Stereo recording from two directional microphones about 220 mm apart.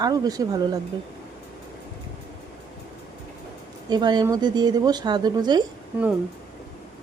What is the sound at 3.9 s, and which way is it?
Speech, 20° right (ahead or behind).